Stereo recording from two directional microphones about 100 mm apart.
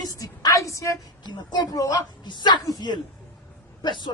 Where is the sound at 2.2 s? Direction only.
45° left (ahead or behind).